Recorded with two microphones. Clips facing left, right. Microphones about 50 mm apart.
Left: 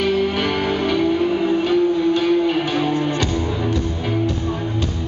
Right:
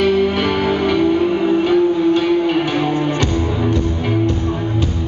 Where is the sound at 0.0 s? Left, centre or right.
Centre.